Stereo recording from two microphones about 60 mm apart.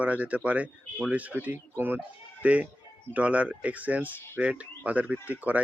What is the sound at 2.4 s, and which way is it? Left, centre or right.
Speech, right.